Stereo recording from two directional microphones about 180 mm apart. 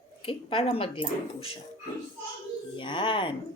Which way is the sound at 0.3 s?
30° left (ahead or behind).